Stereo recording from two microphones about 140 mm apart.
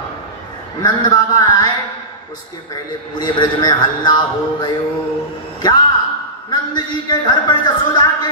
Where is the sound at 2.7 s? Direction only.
30° left (ahead or behind).